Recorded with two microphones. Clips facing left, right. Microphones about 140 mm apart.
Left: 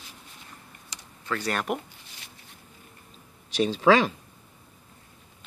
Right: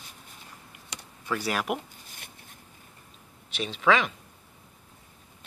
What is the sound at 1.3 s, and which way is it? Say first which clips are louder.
Speech: even; 5° right (ahead or behind).